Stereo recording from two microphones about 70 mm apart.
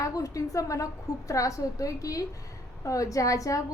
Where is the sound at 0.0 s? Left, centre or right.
Left.